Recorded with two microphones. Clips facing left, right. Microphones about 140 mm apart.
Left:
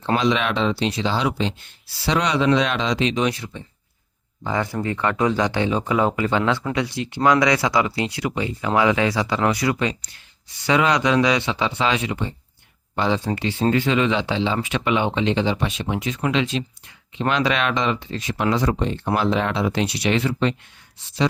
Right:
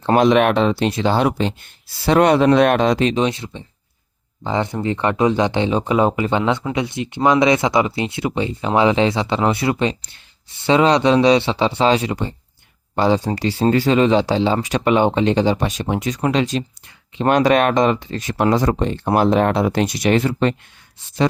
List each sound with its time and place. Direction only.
0.0 s speech: 50° right (ahead or behind)
3.2 s speech: 25° right (ahead or behind); by 20.6 s 45° right (ahead or behind)